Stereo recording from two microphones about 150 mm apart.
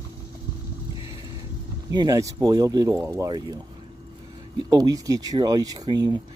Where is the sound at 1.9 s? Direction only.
25° right (ahead or behind).